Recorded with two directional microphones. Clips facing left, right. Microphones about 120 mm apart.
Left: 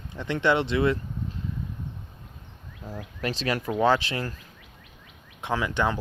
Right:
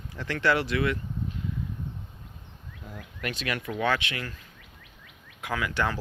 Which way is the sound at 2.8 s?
30° left (ahead or behind).